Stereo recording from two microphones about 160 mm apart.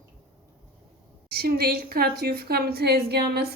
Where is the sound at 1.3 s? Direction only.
75° right (ahead or behind).